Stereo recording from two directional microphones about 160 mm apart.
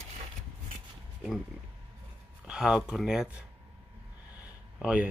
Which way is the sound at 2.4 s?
5° right (ahead or behind).